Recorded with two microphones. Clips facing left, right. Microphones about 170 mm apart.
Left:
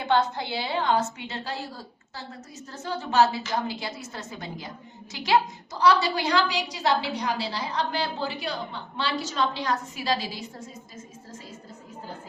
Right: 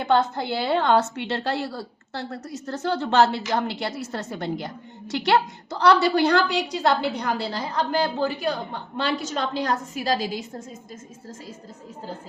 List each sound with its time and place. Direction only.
0.3 s a woman's voice: 55° right (ahead or behind)